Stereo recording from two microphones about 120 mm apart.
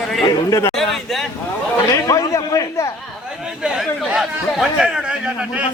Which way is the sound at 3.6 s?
5° right (ahead or behind).